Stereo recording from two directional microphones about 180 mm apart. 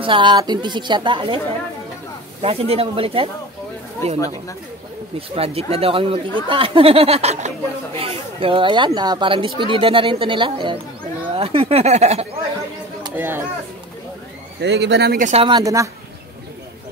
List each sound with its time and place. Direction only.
0.0 s speech: 25° right (ahead or behind)
2.4 s speech: 35° right (ahead or behind)
5.3 s speech: 35° right (ahead or behind)
13.1 s speech: 10° right (ahead or behind)
14.6 s speech: 75° right (ahead or behind)
15.1 s speech: 45° right (ahead or behind)
15.4 s speech: 20° right (ahead or behind)